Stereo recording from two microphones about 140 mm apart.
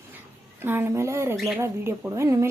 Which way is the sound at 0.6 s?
15° right (ahead or behind).